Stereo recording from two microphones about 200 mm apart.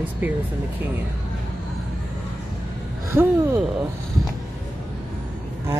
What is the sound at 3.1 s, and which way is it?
Speech, 10° right (ahead or behind).